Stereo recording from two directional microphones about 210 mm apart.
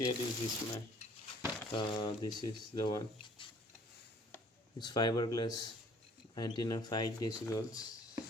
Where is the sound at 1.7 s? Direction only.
20° left (ahead or behind).